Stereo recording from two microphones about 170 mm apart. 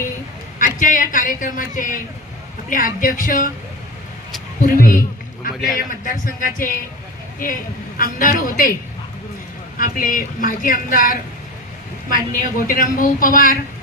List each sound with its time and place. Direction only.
0.6 s a man's voice: 50° left (ahead or behind)
4.6 s a sound: 55° left (ahead or behind)
5.8 s a woman's voice: 55° left (ahead or behind)
8.0 s a woman's voice: 55° left (ahead or behind)
9.8 s a man's voice: 55° left (ahead or behind)